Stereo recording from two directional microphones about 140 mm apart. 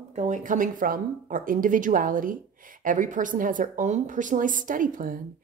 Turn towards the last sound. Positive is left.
turn(degrees=-75)  # may be behind; listen again after turning